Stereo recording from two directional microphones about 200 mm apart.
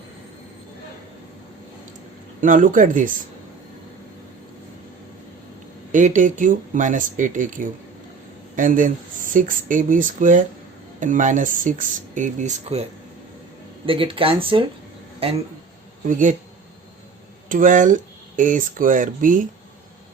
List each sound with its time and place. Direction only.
2.4 s speech: 40° right (ahead or behind)
5.9 s speech: 40° right (ahead or behind)
13.8 s speech: 25° right (ahead or behind)
16.0 s speech: 40° right (ahead or behind)
17.5 s speech: 40° right (ahead or behind)